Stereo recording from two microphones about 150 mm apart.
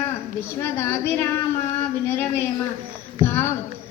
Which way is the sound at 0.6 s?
15° left (ahead or behind).